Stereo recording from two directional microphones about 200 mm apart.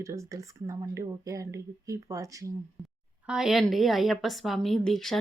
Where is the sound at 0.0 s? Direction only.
15° right (ahead or behind).